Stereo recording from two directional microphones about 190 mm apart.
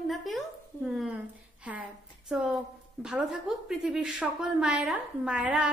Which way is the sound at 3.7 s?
Centre (ahead or behind).